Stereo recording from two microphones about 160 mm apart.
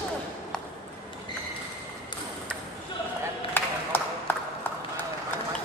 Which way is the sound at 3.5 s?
10° left (ahead or behind).